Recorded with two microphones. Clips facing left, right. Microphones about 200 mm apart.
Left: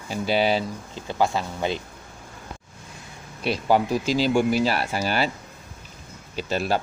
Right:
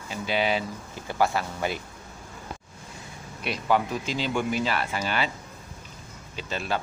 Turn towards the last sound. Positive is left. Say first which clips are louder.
# left 6 dB
turn(degrees=40)  # may be behind; listen again after turning